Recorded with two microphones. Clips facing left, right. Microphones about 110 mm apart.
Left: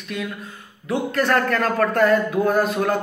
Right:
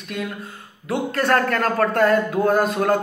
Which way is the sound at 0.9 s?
40° right (ahead or behind).